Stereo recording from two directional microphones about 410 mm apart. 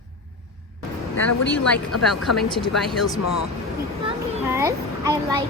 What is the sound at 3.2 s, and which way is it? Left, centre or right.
Speech, left.